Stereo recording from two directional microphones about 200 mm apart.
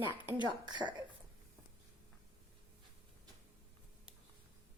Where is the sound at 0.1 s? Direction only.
10° right (ahead or behind).